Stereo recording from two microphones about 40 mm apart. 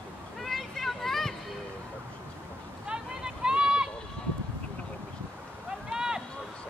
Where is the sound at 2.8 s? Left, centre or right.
Centre.